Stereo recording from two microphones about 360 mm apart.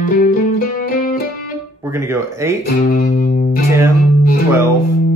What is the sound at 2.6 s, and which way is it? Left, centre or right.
Music, left.